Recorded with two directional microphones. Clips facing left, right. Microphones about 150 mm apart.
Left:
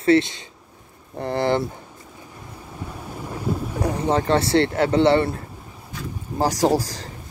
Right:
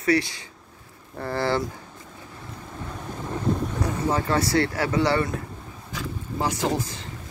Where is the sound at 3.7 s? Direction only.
30° left (ahead or behind).